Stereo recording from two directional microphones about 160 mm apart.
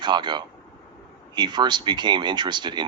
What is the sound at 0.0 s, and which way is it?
Speech, 30° right (ahead or behind).